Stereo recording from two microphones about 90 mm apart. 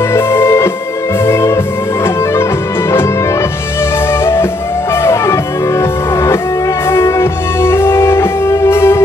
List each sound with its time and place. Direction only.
0.1 s music: 30° left (ahead or behind)
4.2 s music: 30° left (ahead or behind)